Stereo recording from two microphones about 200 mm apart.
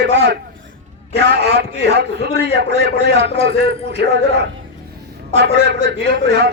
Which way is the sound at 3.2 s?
30° left (ahead or behind).